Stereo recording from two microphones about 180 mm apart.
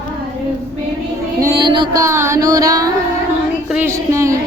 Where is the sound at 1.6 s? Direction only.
25° right (ahead or behind).